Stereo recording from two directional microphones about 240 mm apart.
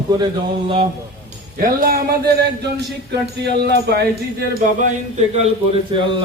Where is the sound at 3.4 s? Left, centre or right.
Right.